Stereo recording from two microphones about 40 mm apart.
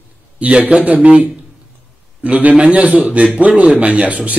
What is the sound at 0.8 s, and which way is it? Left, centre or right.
Speech, right.